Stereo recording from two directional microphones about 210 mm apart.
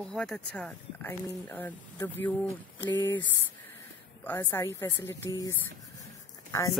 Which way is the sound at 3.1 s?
60° left (ahead or behind).